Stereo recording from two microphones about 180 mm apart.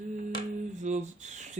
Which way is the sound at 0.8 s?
40° right (ahead or behind).